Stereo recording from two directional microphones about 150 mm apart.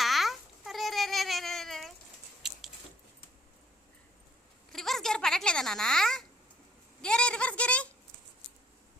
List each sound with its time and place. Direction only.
0.0 s babbling: centre (ahead or behind)
4.7 s a sound: centre (ahead or behind)
7.0 s speech: 5° left (ahead or behind)